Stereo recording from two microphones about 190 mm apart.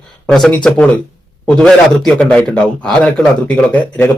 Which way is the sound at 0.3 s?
5° left (ahead or behind).